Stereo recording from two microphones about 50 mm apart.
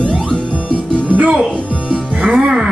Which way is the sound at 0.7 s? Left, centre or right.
Right.